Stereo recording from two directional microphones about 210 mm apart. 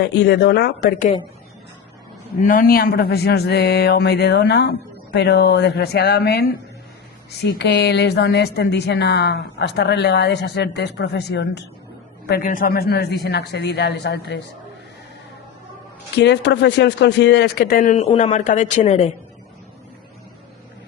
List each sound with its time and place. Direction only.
0.0 s a woman's voice: 55° left (ahead or behind)
2.4 s a woman's voice: 40° left (ahead or behind)
16.1 s a woman's voice: 55° left (ahead or behind); by 19.1 s 30° left (ahead or behind)